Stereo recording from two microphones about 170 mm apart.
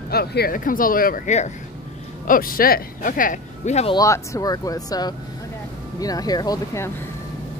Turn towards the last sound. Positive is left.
turn(degrees=20)  # may be behind; listen again after turning